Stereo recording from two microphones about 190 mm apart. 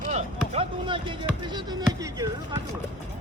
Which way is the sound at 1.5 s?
20° right (ahead or behind).